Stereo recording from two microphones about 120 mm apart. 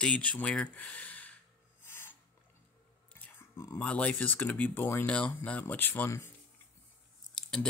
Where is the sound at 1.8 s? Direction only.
20° left (ahead or behind).